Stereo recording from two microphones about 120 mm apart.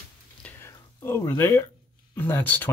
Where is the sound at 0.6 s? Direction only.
20° left (ahead or behind).